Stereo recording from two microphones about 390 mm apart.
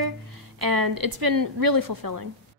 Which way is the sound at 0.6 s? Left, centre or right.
Right.